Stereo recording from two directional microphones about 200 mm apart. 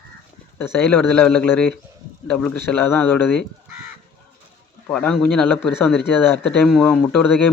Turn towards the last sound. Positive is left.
turn(degrees=5)  # may be behind; listen again after turning